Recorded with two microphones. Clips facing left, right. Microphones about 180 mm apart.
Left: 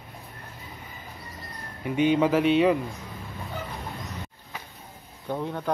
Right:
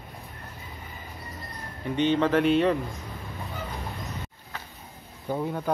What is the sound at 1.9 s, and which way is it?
Speech, 10° left (ahead or behind).